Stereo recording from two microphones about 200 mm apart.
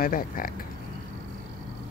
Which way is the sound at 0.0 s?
45° left (ahead or behind).